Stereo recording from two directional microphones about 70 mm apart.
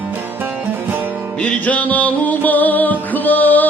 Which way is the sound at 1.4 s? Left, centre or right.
Centre.